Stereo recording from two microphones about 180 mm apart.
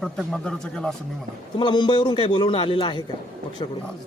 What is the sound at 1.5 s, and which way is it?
A man's voice, 25° left (ahead or behind).